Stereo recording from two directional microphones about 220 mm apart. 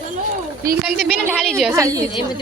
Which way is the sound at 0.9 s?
5° right (ahead or behind).